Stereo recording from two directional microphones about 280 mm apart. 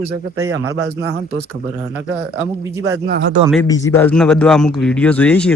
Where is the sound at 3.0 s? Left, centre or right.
Right.